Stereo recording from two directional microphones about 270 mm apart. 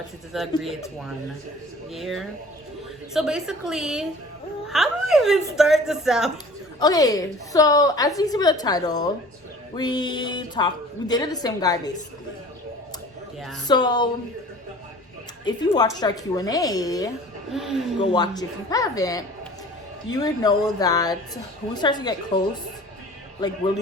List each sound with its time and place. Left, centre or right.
0.3 s a woman's voice: centre
1.9 s a woman's voice: centre
6.7 s a woman's voice: centre
13.7 s a woman's voice: centre
15.4 s a woman's voice: centre
17.5 s a woman's voice: centre
18.1 s a woman's voice: centre